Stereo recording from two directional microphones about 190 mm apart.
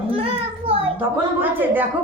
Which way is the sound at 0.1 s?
30° right (ahead or behind).